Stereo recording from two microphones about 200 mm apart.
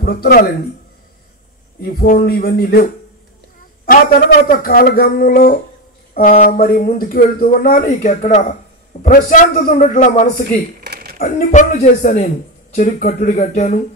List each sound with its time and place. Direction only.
0.0 s speech: 50° left (ahead or behind)
1.8 s speech: 50° left (ahead or behind)
4.5 s a man's voice: 45° left (ahead or behind)
10.9 s a sound: 50° right (ahead or behind)
11.1 s a man's voice: 40° left (ahead or behind)